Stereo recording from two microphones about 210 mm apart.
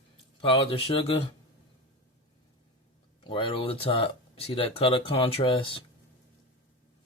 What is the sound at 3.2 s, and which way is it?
Speech, 25° left (ahead or behind).